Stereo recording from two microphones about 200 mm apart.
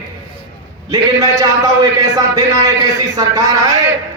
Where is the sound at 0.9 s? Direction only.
20° right (ahead or behind).